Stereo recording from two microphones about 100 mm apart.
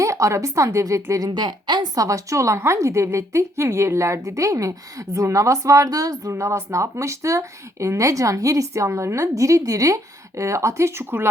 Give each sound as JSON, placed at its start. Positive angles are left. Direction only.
{"t": 0.0, "sound": "speech", "side_deg": -30}
{"t": 1.3, "sound": "a woman's voice", "side_deg": -45}
{"t": 2.0, "sound": "speech", "side_deg": -35}